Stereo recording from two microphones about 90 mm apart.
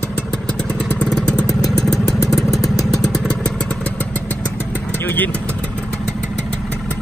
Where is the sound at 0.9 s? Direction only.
10° left (ahead or behind).